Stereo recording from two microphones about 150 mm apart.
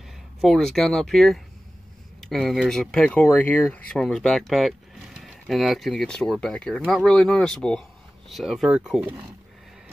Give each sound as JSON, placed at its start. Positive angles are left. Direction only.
{"t": 0.4, "sound": "speech", "side_deg": 0}